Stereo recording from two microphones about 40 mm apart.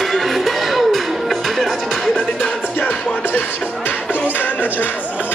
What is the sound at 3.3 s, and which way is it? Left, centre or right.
Music, left.